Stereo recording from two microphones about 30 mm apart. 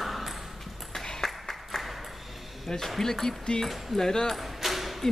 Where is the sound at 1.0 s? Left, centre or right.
Centre.